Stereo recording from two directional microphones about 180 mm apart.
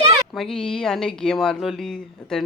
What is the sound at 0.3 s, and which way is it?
Speech, centre (ahead or behind).